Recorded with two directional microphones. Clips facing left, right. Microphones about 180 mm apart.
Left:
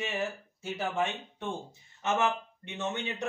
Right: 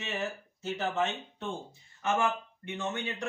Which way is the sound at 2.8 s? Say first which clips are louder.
Left 1 dB; 20° left (ahead or behind).